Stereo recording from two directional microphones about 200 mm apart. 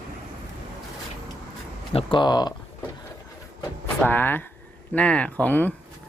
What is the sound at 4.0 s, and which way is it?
Speech, 10° left (ahead or behind).